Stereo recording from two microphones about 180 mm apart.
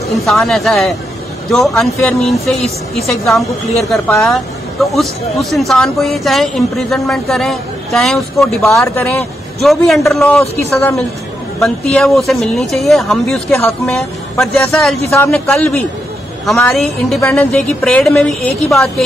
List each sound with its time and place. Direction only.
0.1 s speech: centre (ahead or behind)
8.7 s a man's voice: 15° left (ahead or behind)
9.6 s speech: centre (ahead or behind)
11.6 s speech: centre (ahead or behind)
15.0 s a man's voice: 15° left (ahead or behind)